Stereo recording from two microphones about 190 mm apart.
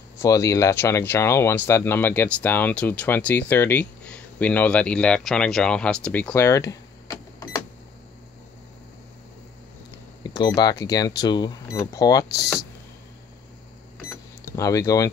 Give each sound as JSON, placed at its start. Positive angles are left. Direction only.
{"t": 0.2, "sound": "speech", "side_deg": 15}
{"t": 10.2, "sound": "speech", "side_deg": 20}
{"t": 14.5, "sound": "speech", "side_deg": 15}